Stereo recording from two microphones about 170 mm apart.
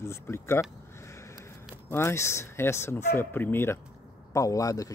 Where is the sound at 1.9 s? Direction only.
15° left (ahead or behind).